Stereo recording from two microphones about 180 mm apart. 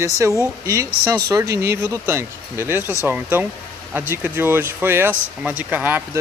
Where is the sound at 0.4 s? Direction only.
15° right (ahead or behind).